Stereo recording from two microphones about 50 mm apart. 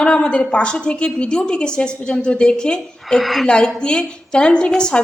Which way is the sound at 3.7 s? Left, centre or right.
Centre.